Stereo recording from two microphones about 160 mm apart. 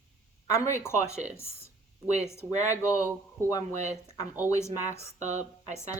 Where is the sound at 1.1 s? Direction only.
45° right (ahead or behind).